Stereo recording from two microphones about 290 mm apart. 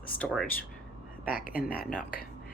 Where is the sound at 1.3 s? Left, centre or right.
Left.